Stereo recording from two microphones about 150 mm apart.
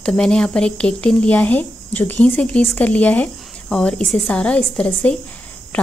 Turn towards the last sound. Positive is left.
turn(degrees=10)  # may be behind; listen again after turning